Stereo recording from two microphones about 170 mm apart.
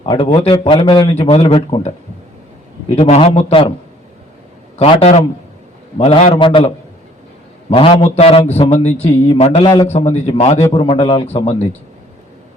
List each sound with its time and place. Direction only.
0.0 s speech: 35° left (ahead or behind)
2.9 s speech: 40° left (ahead or behind)
4.8 s speech: 35° left (ahead or behind)
7.7 s a man's voice: 35° left (ahead or behind)